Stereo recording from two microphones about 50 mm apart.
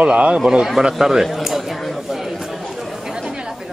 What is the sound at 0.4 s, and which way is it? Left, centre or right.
A man's voice, centre.